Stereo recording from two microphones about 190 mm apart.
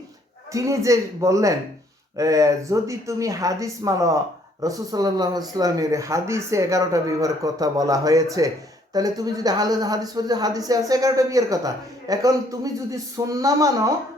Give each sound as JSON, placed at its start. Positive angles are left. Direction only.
{"t": 0.5, "sound": "speech", "side_deg": -15}